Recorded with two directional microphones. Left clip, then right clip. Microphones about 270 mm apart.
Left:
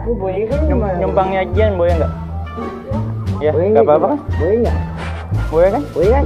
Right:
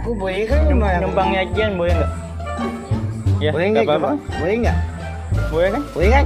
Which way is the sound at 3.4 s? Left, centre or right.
Right.